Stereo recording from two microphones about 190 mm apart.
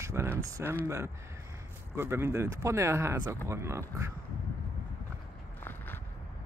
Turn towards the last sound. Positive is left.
turn(degrees=10)  # may be behind; listen again after turning